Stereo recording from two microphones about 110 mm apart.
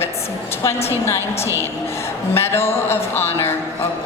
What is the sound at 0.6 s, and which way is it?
A woman's voice, 25° left (ahead or behind).